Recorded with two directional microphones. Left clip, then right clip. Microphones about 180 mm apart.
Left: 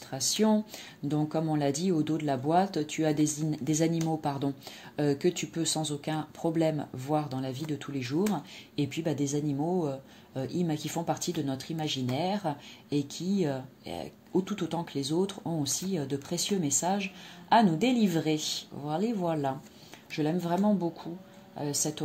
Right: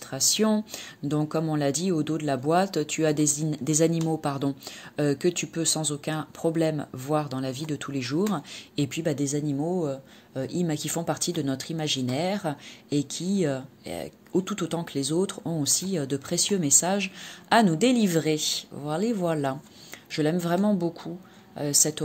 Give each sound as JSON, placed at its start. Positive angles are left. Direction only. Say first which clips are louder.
{"t": 0.1, "sound": "speech", "louder": "right 3 dB", "side_deg": -25}